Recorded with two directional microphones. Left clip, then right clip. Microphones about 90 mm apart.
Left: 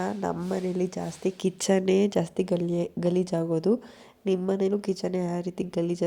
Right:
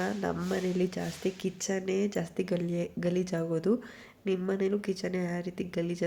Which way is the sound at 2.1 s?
70° left (ahead or behind).